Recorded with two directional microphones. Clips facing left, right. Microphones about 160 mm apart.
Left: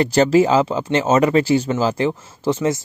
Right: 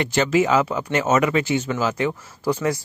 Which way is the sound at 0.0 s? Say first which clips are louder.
Left 5 dB; 35° left (ahead or behind).